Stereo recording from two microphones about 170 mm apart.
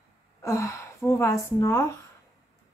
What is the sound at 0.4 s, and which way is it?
A woman's voice, 20° left (ahead or behind).